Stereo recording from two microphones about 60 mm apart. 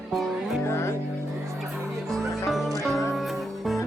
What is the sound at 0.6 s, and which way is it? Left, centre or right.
Music, left.